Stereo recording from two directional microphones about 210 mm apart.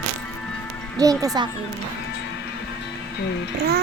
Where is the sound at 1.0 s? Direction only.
15° right (ahead or behind).